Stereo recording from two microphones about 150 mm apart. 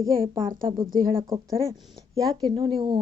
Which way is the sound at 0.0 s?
25° right (ahead or behind).